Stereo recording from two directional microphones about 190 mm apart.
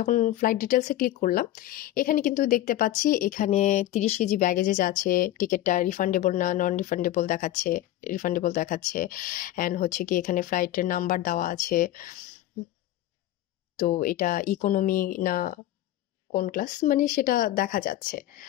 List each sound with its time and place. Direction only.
0.0 s speech: 45° left (ahead or behind)
13.7 s speech: 45° left (ahead or behind)